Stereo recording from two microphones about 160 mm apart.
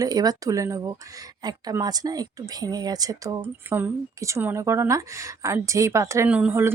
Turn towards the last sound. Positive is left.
turn(degrees=-10)  # may be behind; listen again after turning